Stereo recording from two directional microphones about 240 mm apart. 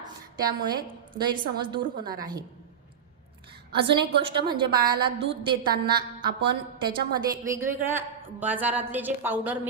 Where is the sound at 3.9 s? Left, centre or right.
Centre.